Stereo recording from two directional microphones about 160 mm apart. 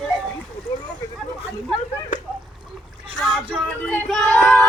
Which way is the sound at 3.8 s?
5° left (ahead or behind).